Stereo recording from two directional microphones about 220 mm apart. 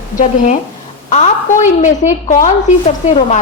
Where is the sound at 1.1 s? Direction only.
35° left (ahead or behind).